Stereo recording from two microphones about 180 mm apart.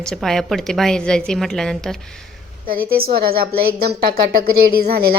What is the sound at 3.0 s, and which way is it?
Speech, 55° right (ahead or behind).